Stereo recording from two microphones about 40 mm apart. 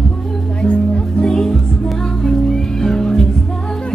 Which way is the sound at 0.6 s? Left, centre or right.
Left.